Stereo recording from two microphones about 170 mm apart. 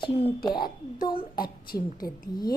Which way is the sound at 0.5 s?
60° left (ahead or behind).